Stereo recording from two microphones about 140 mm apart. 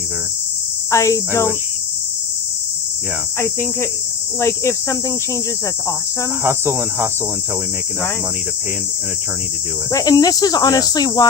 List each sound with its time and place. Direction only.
0.9 s speech: 20° left (ahead or behind)
3.4 s speech: 20° left (ahead or behind)
6.4 s cricket: 15° right (ahead or behind)
9.9 s speech: 25° left (ahead or behind)